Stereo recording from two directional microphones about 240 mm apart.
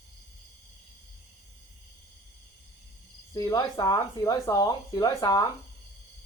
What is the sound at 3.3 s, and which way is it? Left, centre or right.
Speech, centre.